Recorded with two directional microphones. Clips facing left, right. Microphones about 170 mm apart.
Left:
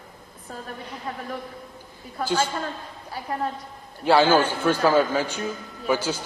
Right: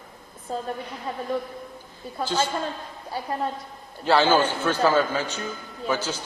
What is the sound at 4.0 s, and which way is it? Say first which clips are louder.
A man's voice: left 2 dB; 10° left (ahead or behind).